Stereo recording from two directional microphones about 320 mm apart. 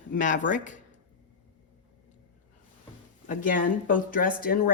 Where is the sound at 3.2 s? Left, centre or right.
Left.